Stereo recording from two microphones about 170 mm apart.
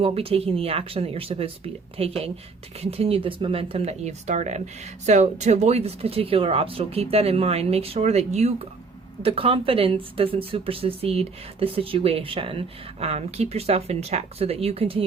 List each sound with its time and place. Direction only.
0.0 s speech: 35° right (ahead or behind)